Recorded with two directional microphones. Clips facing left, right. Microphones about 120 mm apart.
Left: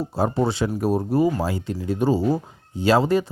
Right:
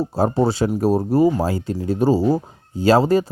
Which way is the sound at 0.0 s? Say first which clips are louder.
Right 4 dB; 40° right (ahead or behind).